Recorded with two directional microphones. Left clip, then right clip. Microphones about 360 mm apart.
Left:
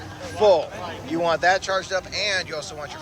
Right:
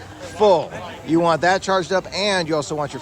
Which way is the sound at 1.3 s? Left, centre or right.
Centre.